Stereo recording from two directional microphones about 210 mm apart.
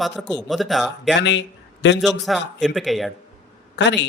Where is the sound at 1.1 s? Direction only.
55° left (ahead or behind).